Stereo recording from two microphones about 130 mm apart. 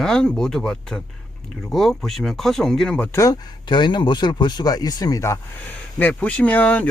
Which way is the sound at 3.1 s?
25° left (ahead or behind).